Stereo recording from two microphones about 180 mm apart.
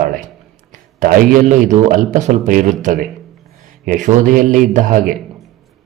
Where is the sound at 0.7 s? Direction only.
50° right (ahead or behind).